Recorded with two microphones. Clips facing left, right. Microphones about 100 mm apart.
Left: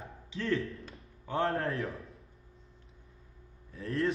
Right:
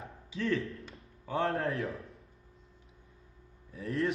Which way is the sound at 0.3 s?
Centre (ahead or behind).